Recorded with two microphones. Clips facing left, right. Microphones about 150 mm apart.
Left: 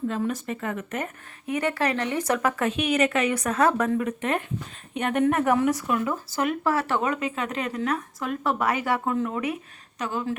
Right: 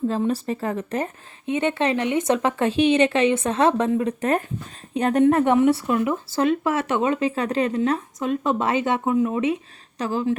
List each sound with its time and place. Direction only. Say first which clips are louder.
0.1 s speech: right 5 dB; 30° right (ahead or behind)
4.2 s speech: right 4 dB; 40° right (ahead or behind); by 9.6 s 20° right (ahead or behind)
10.0 s speech: right 5 dB; 30° right (ahead or behind)